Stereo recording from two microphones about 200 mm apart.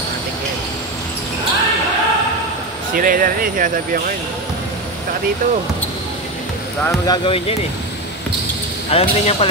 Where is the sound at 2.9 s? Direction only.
45° right (ahead or behind).